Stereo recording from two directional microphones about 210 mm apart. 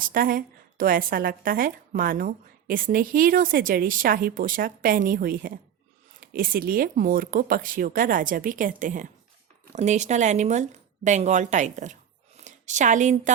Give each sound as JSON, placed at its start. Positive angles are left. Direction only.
{"t": 0.0, "sound": "a woman's voice", "side_deg": -40}